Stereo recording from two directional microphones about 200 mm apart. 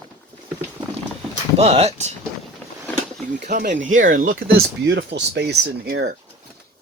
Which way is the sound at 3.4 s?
40° right (ahead or behind).